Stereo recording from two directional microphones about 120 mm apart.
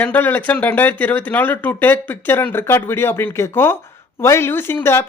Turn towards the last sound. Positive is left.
turn(degrees=20)  # may be behind; listen again after turning